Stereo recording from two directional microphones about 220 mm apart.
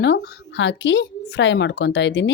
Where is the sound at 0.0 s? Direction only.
55° left (ahead or behind).